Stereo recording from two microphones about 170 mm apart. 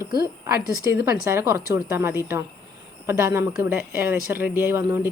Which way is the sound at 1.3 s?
15° right (ahead or behind).